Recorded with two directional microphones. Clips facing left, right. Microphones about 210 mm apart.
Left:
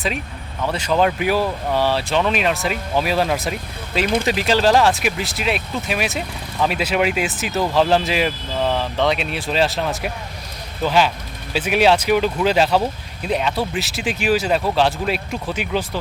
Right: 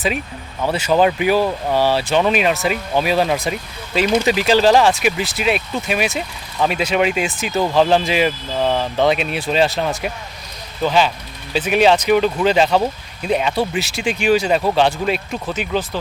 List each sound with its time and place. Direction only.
0.7 s speech: 5° right (ahead or behind)
4.0 s speech: 55° left (ahead or behind)
4.3 s speech: centre (ahead or behind)